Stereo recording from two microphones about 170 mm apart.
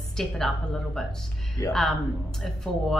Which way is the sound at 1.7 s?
Centre (ahead or behind).